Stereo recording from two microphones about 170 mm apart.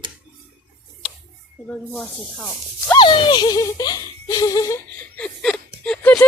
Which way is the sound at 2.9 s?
25° left (ahead or behind).